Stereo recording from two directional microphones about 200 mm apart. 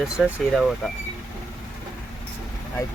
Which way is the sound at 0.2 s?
5° right (ahead or behind).